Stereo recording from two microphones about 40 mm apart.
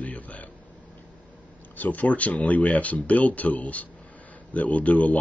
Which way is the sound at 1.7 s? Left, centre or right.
Left.